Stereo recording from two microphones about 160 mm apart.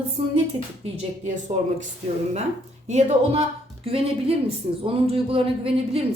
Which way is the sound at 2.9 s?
45° right (ahead or behind).